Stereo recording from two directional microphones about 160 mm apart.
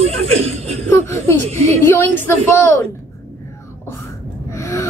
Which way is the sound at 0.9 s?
15° left (ahead or behind).